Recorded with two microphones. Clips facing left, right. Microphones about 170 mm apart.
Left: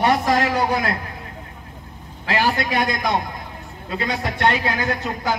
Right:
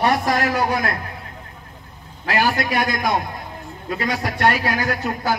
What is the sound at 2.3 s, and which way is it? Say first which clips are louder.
A man's voice: right 1 dB; 25° left (ahead or behind).